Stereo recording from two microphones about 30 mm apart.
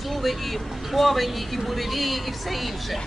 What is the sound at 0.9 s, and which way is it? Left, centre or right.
A woman's voice, centre.